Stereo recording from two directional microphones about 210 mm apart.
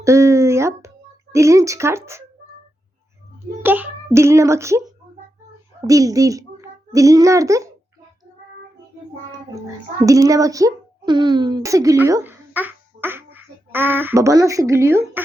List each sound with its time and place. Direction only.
0.0 s a sound: 15° right (ahead or behind)
1.3 s child singing: 15° right (ahead or behind)
3.6 s child singing: 10° right (ahead or behind)
5.8 s a child's voice: 15° right (ahead or behind)
10.1 s speech: 15° right (ahead or behind)